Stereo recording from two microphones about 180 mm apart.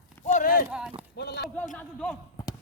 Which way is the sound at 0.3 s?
50° left (ahead or behind).